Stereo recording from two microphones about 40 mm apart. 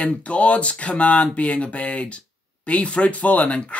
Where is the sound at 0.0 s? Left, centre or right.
Left.